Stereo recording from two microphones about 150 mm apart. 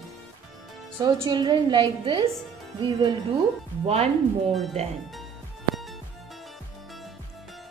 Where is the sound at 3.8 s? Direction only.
45° right (ahead or behind).